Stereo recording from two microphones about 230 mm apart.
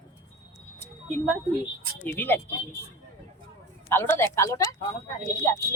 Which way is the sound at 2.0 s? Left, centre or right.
Centre.